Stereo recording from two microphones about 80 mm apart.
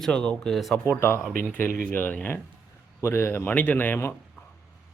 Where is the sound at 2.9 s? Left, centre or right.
Left.